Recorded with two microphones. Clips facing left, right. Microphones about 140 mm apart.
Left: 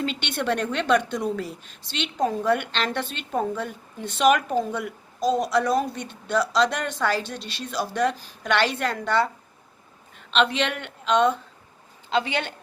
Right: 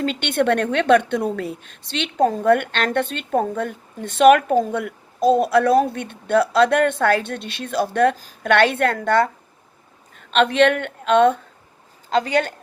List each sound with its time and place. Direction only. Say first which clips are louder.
0.0 s a woman's voice: right 7 dB; 50° right (ahead or behind)
12.1 s a woman's voice: right 6 dB; 40° right (ahead or behind)